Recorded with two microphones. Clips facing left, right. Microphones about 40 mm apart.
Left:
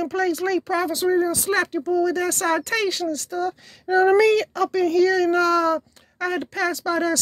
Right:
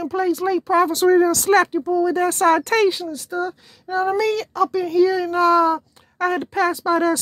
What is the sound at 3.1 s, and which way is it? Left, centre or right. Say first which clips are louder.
Speech: right 1 dB; centre.